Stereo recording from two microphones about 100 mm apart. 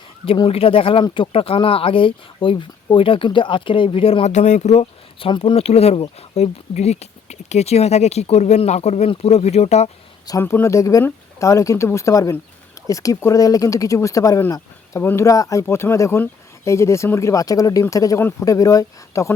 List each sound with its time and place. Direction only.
0.4 s speech: 70° left (ahead or behind); by 5.3 s 90° left
5.4 s speech: 75° left (ahead or behind)
10.4 s speech: 25° left (ahead or behind)
18.2 s speech: 25° left (ahead or behind)
18.4 s speech: 35° left (ahead or behind)